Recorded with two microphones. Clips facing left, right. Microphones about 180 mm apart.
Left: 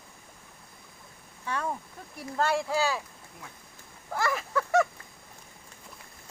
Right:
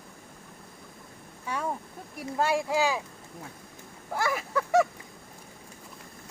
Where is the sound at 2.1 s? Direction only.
10° right (ahead or behind).